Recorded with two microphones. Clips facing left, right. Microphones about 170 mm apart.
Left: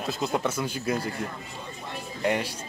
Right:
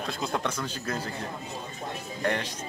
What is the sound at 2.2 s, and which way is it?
Speech, 10° left (ahead or behind).